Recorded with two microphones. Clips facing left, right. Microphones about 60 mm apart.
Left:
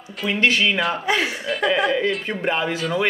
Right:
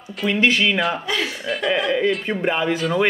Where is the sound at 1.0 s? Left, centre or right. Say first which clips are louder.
Left 3 dB; left.